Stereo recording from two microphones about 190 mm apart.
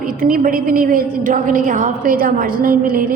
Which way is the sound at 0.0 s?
50° right (ahead or behind).